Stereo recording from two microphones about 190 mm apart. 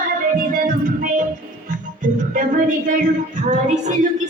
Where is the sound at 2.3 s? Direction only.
45° right (ahead or behind).